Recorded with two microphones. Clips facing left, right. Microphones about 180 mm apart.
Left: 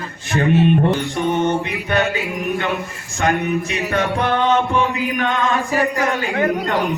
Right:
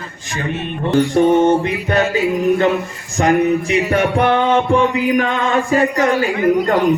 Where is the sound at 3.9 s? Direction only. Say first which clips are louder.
Right 3 dB; 25° right (ahead or behind).